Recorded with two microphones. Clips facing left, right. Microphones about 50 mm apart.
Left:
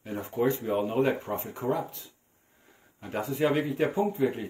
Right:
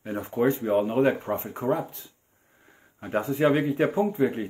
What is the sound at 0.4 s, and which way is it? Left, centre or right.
Speech, right.